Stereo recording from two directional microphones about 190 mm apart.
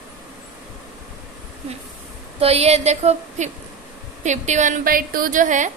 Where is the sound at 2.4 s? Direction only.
35° right (ahead or behind).